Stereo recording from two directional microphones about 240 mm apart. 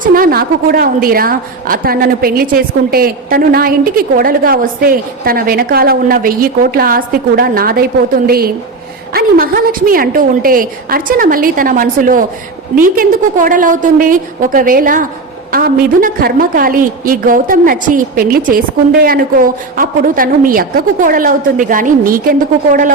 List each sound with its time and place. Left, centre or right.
0.0 s a woman's voice: right
9.1 s a woman's voice: right
19.7 s a woman's voice: right